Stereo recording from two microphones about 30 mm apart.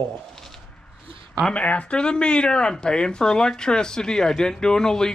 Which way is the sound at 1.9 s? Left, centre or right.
Left.